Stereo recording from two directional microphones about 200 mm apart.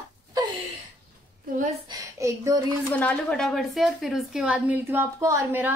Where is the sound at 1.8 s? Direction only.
15° right (ahead or behind).